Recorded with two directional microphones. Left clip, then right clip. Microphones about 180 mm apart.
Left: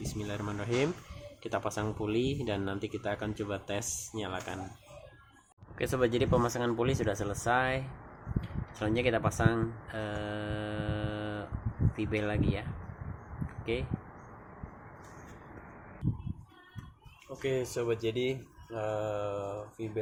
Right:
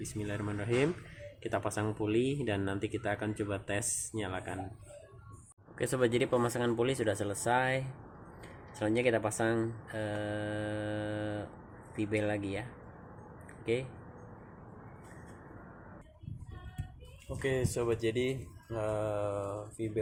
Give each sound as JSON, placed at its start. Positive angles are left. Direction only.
{"t": 0.2, "sound": "speech", "side_deg": -5}
{"t": 5.7, "sound": "speech", "side_deg": -5}
{"t": 17.4, "sound": "speech", "side_deg": -15}